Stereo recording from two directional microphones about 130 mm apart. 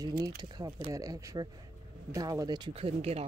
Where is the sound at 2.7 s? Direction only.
50° right (ahead or behind).